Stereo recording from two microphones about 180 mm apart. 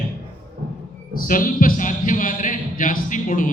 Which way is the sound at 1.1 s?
50° left (ahead or behind).